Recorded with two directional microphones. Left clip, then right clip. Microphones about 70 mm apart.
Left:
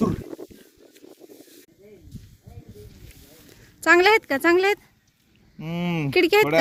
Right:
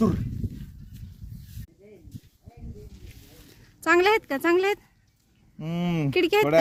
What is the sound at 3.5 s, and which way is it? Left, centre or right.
Speech, centre.